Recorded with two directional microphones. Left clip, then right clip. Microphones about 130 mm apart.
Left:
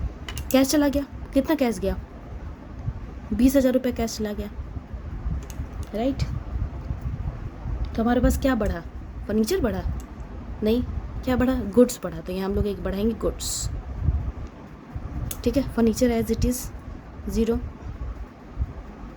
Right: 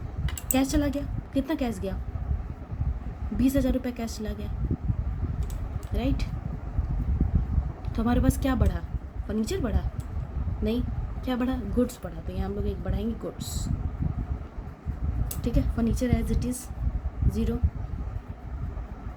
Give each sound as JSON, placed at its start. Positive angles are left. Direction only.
{"t": 0.5, "sound": "a woman's voice", "side_deg": 50}
{"t": 3.3, "sound": "a woman's voice", "side_deg": 45}
{"t": 5.9, "sound": "a woman's voice", "side_deg": 20}
{"t": 7.9, "sound": "a woman's voice", "side_deg": 20}
{"t": 11.8, "sound": "speech", "side_deg": 75}
{"t": 15.4, "sound": "a woman's voice", "side_deg": 70}